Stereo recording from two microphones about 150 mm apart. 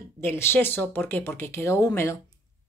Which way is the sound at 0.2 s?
15° left (ahead or behind).